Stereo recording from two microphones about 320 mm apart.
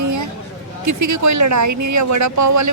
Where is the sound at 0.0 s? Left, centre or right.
Right.